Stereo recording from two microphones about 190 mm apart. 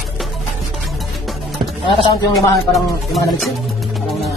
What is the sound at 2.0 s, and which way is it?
Speech, 15° left (ahead or behind).